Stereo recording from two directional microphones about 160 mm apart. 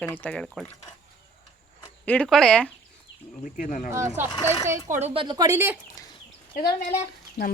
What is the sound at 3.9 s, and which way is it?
Speech, 15° right (ahead or behind).